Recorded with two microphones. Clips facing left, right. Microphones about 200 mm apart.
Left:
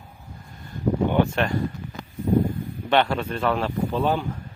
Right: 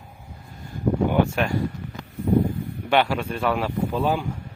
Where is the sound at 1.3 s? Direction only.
10° right (ahead or behind).